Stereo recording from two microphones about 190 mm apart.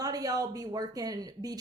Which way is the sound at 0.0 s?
20° right (ahead or behind).